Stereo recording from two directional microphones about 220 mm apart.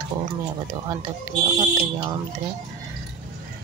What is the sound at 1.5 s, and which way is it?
Speech, 20° right (ahead or behind).